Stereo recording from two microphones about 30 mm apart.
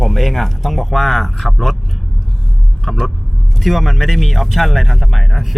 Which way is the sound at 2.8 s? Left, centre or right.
Centre.